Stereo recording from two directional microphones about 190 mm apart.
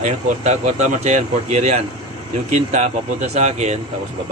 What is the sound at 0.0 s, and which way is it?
Speech, 40° right (ahead or behind).